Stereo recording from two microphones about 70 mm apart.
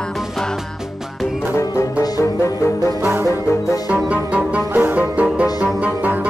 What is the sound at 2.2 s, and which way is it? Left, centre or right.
Music, left.